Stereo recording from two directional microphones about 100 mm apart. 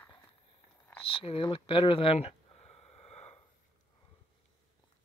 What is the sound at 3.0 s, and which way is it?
Snort, 90° left.